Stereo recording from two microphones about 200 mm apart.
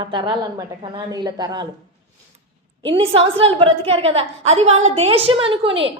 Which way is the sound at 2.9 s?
25° right (ahead or behind).